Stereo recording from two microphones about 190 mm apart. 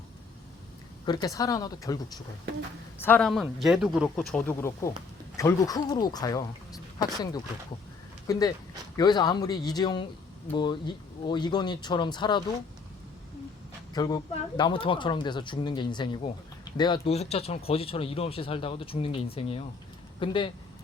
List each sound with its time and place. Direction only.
1.0 s speech: 20° left (ahead or behind)
3.0 s speech: 5° left (ahead or behind); by 12.4 s 25° left (ahead or behind)
13.9 s speech: 20° left (ahead or behind)